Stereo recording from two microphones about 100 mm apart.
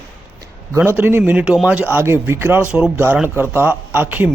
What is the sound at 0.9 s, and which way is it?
Speech, 20° right (ahead or behind).